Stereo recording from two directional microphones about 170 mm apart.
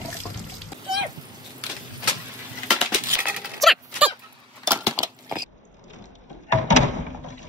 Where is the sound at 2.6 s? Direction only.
5° right (ahead or behind).